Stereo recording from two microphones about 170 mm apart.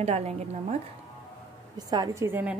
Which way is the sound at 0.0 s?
40° right (ahead or behind).